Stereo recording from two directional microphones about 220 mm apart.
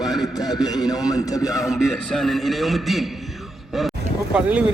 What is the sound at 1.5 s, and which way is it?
A man's voice, centre (ahead or behind).